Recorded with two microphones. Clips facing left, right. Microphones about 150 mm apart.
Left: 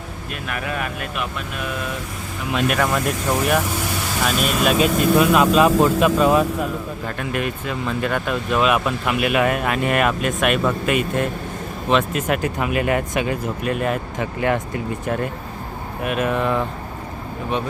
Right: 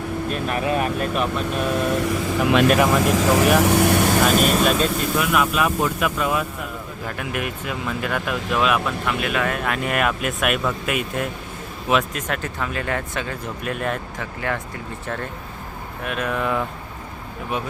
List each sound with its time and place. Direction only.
0.3 s speech: 30° right (ahead or behind)
1.9 s speech: 85° right
3.6 s speech: 65° right (ahead or behind)
4.4 s speech: centre (ahead or behind)
4.9 s speech: 25° left (ahead or behind)
7.2 s speech: 10° right (ahead or behind)
12.3 s speech: 10° left (ahead or behind)
13.6 s speech: centre (ahead or behind)
14.2 s speech: 20° left (ahead or behind); by 16.6 s centre (ahead or behind)